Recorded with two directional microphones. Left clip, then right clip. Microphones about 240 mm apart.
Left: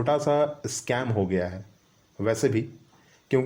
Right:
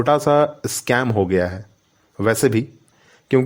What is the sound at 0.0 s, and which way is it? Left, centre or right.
A man's voice, right.